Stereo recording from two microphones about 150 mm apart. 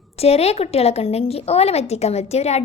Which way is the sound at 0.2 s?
45° left (ahead or behind).